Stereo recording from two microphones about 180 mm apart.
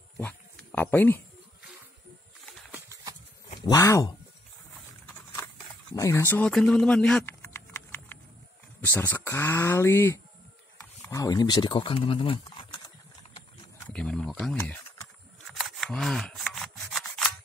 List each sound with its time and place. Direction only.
0.2 s speech: 10° left (ahead or behind)
2.7 s a sound: 20° right (ahead or behind)
3.5 s speech: 20° left (ahead or behind)
5.9 s speech: 15° left (ahead or behind)
7.4 s typing: 15° left (ahead or behind)
8.8 s speech: 10° left (ahead or behind)
13.8 s speech: 5° left (ahead or behind)
15.4 s rub: centre (ahead or behind)